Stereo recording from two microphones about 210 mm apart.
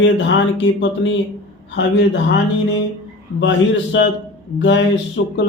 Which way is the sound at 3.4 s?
60° left (ahead or behind).